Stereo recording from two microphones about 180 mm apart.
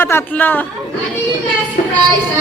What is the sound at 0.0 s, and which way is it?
Speech, 10° left (ahead or behind).